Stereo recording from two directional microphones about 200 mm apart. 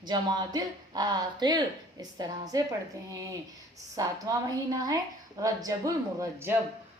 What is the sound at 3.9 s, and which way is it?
A woman's voice, 15° right (ahead or behind).